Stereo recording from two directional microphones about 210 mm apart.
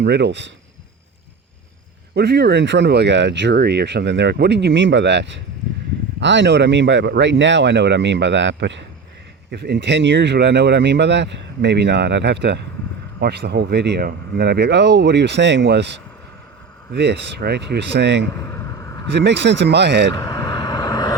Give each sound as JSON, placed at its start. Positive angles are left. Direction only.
{"t": 0.0, "sound": "speech", "side_deg": -55}
{"t": 2.1, "sound": "speech", "side_deg": -50}
{"t": 18.4, "sound": "a sound", "side_deg": 10}
{"t": 19.1, "sound": "speech", "side_deg": -55}
{"t": 20.1, "sound": "vehicle", "side_deg": 15}